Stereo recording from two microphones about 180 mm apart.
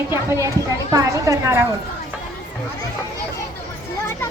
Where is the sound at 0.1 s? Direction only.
15° right (ahead or behind).